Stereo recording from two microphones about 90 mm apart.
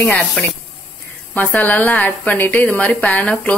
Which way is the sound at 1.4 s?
15° left (ahead or behind).